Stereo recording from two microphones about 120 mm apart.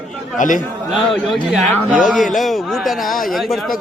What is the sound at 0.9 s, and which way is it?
Speech, centre (ahead or behind).